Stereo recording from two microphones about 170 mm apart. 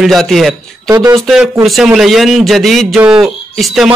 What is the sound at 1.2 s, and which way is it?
Speech, centre (ahead or behind).